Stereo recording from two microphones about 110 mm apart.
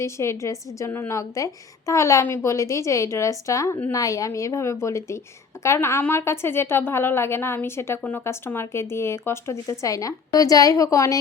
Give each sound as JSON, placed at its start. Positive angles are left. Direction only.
{"t": 0.0, "sound": "a woman's voice", "side_deg": 25}